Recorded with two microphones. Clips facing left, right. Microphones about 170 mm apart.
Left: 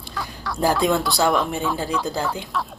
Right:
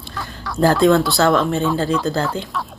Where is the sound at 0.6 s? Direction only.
15° left (ahead or behind).